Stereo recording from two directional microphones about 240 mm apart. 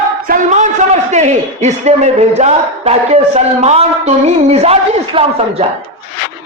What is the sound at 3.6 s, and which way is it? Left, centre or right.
A man's voice, right.